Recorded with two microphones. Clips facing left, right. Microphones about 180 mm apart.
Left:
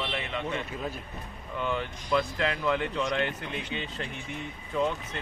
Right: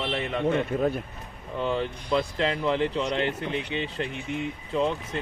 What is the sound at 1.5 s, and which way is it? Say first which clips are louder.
A man's voice: right 4 dB; 30° right (ahead or behind).